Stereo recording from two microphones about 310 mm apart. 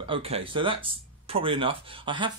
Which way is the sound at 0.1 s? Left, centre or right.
Centre.